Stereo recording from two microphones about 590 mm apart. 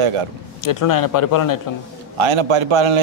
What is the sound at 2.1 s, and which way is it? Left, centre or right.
Speech, right.